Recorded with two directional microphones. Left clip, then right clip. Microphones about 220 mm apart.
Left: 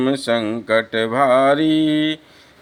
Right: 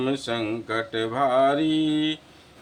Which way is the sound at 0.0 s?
40° left (ahead or behind).